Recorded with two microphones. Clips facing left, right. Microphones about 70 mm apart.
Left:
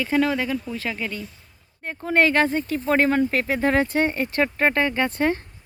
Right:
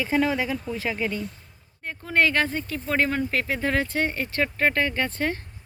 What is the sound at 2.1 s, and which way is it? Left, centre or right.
Speech, left.